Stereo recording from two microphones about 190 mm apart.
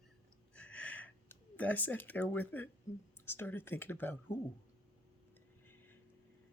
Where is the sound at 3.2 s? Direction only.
10° left (ahead or behind).